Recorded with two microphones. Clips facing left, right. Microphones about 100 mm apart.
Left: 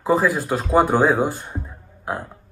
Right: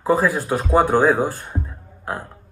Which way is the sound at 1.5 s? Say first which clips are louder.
Right 3 dB; 5° left (ahead or behind).